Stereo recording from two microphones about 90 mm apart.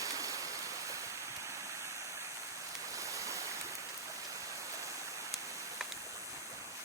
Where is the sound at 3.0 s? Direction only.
35° right (ahead or behind).